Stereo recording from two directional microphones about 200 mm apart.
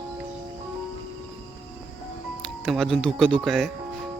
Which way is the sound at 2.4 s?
Centre (ahead or behind).